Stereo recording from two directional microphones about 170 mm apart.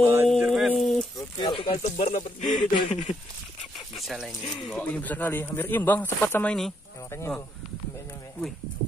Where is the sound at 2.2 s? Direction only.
25° left (ahead or behind).